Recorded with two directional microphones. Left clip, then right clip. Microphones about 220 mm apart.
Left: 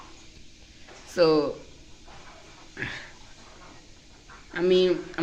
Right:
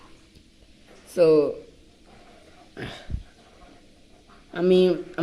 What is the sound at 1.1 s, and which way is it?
Speech, 15° right (ahead or behind).